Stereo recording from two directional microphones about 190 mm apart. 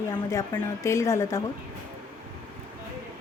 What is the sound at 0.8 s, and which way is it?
Speech, 15° left (ahead or behind).